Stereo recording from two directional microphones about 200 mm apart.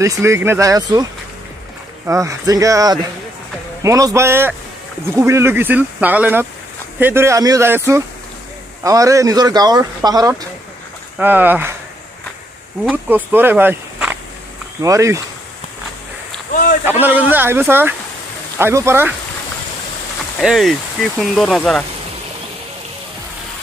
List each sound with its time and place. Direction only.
0.0 s speech: 15° right (ahead or behind)
2.0 s speech: 15° right (ahead or behind)
12.8 s speech: 10° right (ahead or behind)
17.0 s speech: 10° right (ahead or behind)
20.3 s speech: centre (ahead or behind)